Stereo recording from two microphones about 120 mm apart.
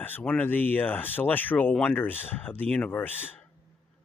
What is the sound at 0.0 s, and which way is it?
Speech, 15° left (ahead or behind).